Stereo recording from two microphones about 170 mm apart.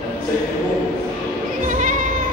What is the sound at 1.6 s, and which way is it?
Sheep, 50° right (ahead or behind).